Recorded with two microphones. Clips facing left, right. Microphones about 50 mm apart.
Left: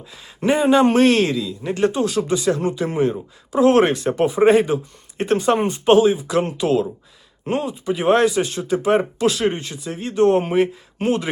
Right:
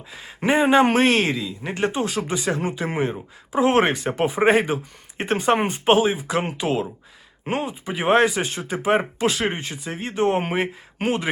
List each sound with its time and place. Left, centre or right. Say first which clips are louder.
0.1 s speech: left 1 dB; right